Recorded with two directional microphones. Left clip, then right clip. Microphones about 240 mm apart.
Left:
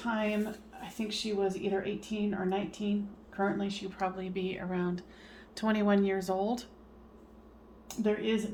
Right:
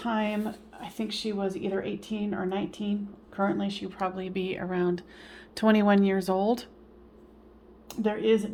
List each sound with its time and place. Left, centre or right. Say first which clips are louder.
0.0 s speech: right 3 dB; right
7.9 s speech: right 6 dB; right